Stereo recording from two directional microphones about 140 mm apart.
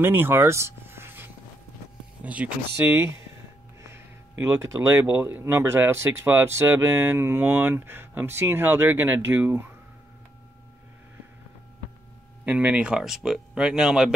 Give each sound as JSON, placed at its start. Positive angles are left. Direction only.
{"t": 0.0, "sound": "speech", "side_deg": -15}
{"t": 3.8, "sound": "speech", "side_deg": -20}
{"t": 12.4, "sound": "speech", "side_deg": -10}